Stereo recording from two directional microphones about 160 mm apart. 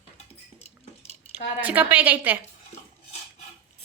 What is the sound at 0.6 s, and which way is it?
Cutlery, 40° left (ahead or behind).